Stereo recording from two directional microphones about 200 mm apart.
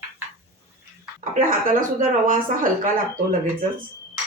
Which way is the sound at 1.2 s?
40° right (ahead or behind).